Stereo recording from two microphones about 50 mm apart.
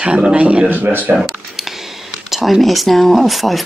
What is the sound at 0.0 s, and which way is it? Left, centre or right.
Speech, centre.